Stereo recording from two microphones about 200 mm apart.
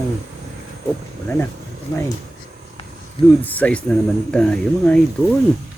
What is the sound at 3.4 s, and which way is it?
Speech, 10° left (ahead or behind).